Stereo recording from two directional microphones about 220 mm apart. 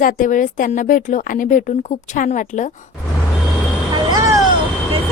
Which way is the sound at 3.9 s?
15° right (ahead or behind).